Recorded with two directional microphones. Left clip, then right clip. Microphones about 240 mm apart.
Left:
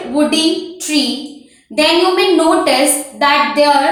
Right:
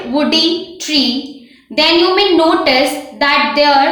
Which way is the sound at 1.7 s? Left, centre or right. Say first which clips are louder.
Right 1 dB; right.